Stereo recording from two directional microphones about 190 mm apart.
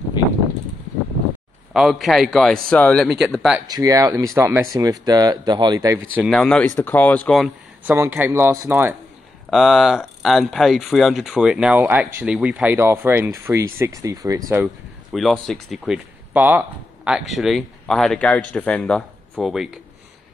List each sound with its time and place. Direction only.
1.7 s speech: centre (ahead or behind)
3.6 s speech: 20° right (ahead or behind)
6.1 s speech: centre (ahead or behind)
7.8 s speech: 10° right (ahead or behind)
9.5 s speech: centre (ahead or behind); by 14.4 s 15° right (ahead or behind)
15.1 s speech: centre (ahead or behind)